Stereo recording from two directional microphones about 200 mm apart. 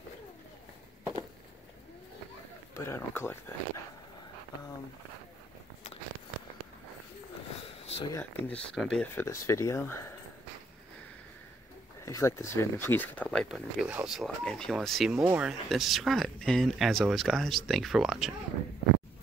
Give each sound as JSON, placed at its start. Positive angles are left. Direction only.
{"t": 2.7, "sound": "speech", "side_deg": 15}
{"t": 7.8, "sound": "a sound", "side_deg": 30}
{"t": 8.1, "sound": "speech", "side_deg": 10}
{"t": 12.0, "sound": "speech", "side_deg": 15}